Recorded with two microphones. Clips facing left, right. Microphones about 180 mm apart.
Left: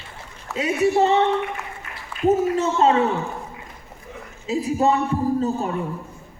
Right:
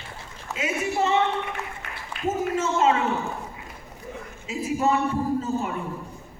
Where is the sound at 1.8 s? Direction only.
70° right (ahead or behind).